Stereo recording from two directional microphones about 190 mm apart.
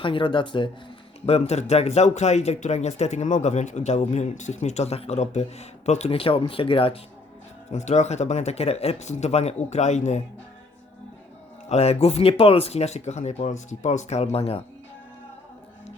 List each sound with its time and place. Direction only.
0.0 s speech: 25° left (ahead or behind)
1.3 s speech: 35° left (ahead or behind)
11.7 s speech: 35° left (ahead or behind)